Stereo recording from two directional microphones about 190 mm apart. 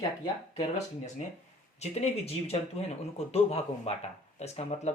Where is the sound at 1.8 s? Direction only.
35° left (ahead or behind).